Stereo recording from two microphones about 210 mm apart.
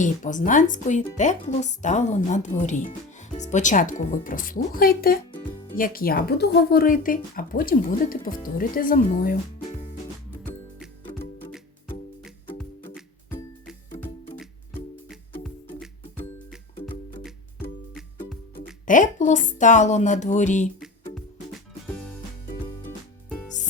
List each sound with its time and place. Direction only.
0.0 s speech: 40° left (ahead or behind)
15.4 s music: centre (ahead or behind)
18.5 s speech: 40° left (ahead or behind)
20.7 s music: centre (ahead or behind)